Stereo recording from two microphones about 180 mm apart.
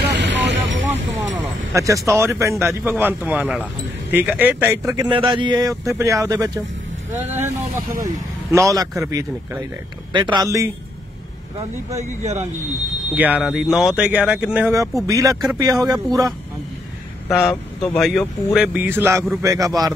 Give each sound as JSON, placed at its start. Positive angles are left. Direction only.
{"t": 0.2, "sound": "vehicle", "side_deg": -85}
{"t": 1.7, "sound": "speech", "side_deg": -15}
{"t": 5.1, "sound": "speech", "side_deg": -30}
{"t": 7.2, "sound": "vehicle", "side_deg": -10}
{"t": 8.0, "sound": "speech", "side_deg": -15}
{"t": 12.0, "sound": "speech", "side_deg": -40}
{"t": 13.1, "sound": "speech", "side_deg": -10}
{"t": 15.0, "sound": "speech", "side_deg": -20}
{"t": 17.3, "sound": "speech", "side_deg": 0}